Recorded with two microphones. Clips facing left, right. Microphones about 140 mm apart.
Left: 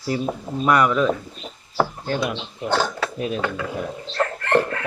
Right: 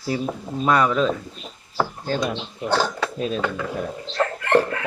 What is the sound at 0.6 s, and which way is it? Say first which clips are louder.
Speech: left 1 dB; 30° right (ahead or behind).